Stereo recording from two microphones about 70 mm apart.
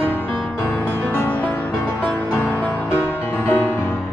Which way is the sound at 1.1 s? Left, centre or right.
Left.